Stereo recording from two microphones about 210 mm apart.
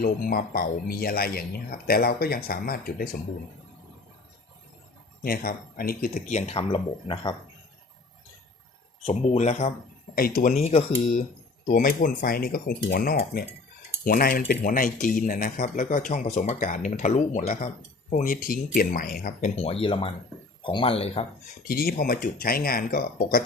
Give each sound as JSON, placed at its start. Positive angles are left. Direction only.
{"t": 0.0, "sound": "speech", "side_deg": 45}
{"t": 5.2, "sound": "speech", "side_deg": 45}
{"t": 9.0, "sound": "speech", "side_deg": 30}
{"t": 10.2, "sound": "speech", "side_deg": 45}
{"t": 10.6, "sound": "speech", "side_deg": 30}
{"t": 11.6, "sound": "speech", "side_deg": 40}
{"t": 19.8, "sound": "speech", "side_deg": 25}
{"t": 21.7, "sound": "speech", "side_deg": 45}